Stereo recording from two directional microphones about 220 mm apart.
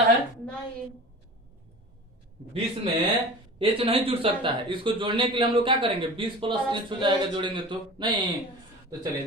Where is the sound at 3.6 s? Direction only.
25° right (ahead or behind).